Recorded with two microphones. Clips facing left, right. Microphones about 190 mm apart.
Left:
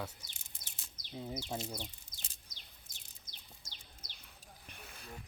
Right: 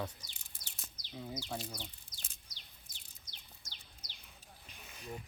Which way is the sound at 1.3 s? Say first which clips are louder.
Left 1 dB; 25° left (ahead or behind).